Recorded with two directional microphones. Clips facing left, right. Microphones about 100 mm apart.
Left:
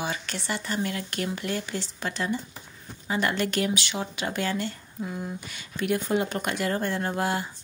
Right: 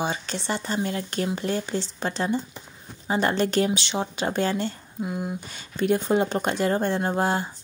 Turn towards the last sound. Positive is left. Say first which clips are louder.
# right 3 dB
turn(degrees=-30)  # may be behind; listen again after turning